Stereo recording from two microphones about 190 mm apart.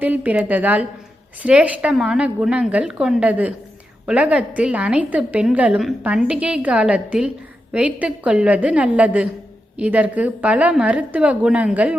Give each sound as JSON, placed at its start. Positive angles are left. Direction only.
{"t": 0.0, "sound": "a woman's voice", "side_deg": -10}